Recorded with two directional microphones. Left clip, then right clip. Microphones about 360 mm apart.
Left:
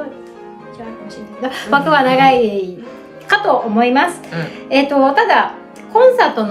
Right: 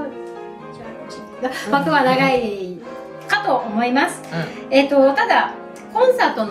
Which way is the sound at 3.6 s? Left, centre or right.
Centre.